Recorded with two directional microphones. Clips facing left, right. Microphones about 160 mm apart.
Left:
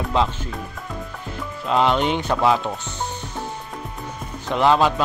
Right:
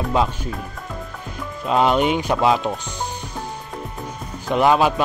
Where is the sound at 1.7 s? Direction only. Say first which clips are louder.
Right 2 dB; 15° right (ahead or behind).